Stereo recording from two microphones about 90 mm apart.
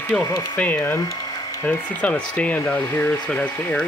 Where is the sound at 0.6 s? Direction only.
15° left (ahead or behind).